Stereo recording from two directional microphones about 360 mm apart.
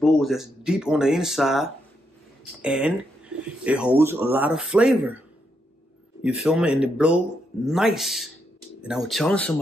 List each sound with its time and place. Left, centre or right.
0.0 s speech: centre
6.2 s speech: centre